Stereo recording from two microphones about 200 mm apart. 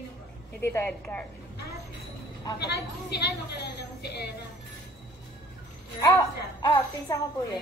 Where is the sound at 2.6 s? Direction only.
55° left (ahead or behind).